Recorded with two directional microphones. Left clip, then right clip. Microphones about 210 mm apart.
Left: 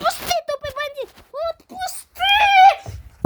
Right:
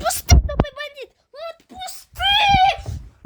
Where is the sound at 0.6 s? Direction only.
10° left (ahead or behind).